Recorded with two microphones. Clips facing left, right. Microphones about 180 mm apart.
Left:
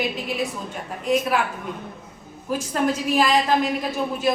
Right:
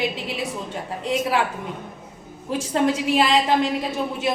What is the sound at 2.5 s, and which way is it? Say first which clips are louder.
A woman's voice: right 2 dB; 25° right (ahead or behind).